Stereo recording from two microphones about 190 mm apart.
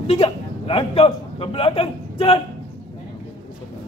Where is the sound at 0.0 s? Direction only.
30° left (ahead or behind).